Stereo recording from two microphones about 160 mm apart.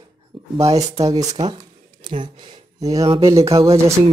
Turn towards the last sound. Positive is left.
turn(degrees=-40)  # may be behind; listen again after turning